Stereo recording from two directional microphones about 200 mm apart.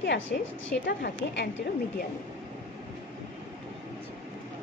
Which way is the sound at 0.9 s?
60° left (ahead or behind).